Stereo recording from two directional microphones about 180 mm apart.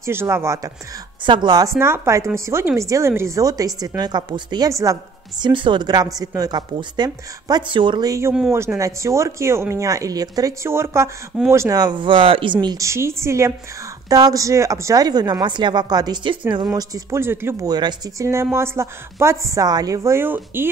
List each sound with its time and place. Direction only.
0.0 s speech: 15° right (ahead or behind)
1.2 s speech: 25° right (ahead or behind)
17.7 s speech: 25° right (ahead or behind)